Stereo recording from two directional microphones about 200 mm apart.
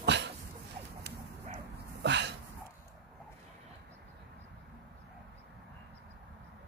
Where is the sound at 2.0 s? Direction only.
60° right (ahead or behind).